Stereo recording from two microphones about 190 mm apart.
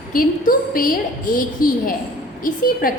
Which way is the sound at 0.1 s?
45° left (ahead or behind).